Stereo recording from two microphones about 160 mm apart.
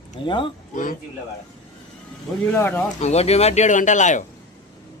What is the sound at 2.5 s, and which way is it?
Speech, 10° left (ahead or behind).